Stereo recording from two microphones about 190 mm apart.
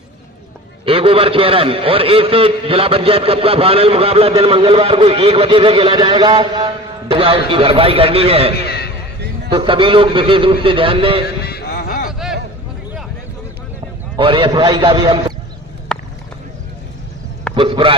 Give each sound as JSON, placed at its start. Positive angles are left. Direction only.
{"t": 0.9, "sound": "a man's voice", "side_deg": -30}
{"t": 8.5, "sound": "a sound", "side_deg": 55}
{"t": 9.5, "sound": "a man's voice", "side_deg": -25}
{"t": 11.3, "sound": "music", "side_deg": 55}
{"t": 14.2, "sound": "a man's voice", "side_deg": -25}
{"t": 15.9, "sound": "clip-clop", "side_deg": 5}
{"t": 17.5, "sound": "a man's voice", "side_deg": -30}